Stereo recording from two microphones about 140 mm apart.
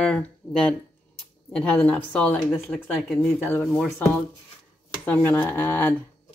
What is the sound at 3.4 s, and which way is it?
Speech, 15° left (ahead or behind).